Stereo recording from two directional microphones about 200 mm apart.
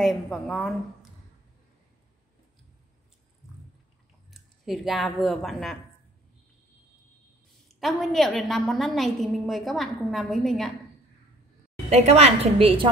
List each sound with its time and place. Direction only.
0.0 s a woman's voice: centre (ahead or behind)
4.3 s speech: centre (ahead or behind)
7.6 s a woman's voice: centre (ahead or behind)
11.9 s a woman's voice: 30° right (ahead or behind)